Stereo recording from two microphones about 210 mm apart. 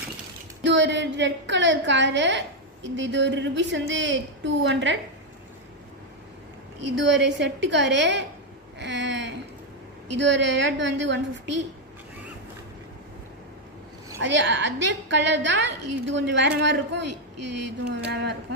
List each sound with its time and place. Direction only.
0.6 s a woman's voice: 60° right (ahead or behind)
6.8 s a woman's voice: 60° right (ahead or behind)
14.2 s a woman's voice: 60° right (ahead or behind)